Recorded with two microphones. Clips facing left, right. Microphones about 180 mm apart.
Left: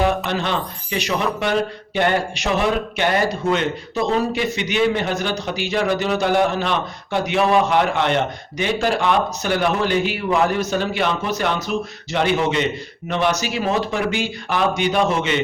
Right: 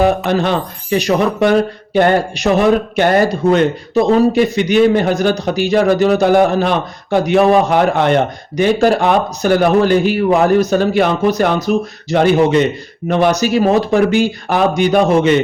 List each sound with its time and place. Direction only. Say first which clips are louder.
0.3 s speech: right 7 dB; 45° right (ahead or behind)